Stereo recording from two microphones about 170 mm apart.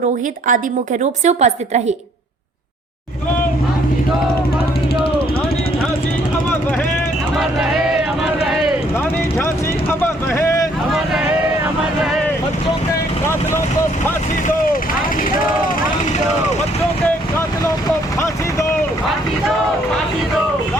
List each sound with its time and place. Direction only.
1.2 s a woman's voice: 40° right (ahead or behind)
7.3 s vehicle: 5° right (ahead or behind)
10.0 s vehicle: 15° left (ahead or behind)
14.4 s vehicle: 55° left (ahead or behind)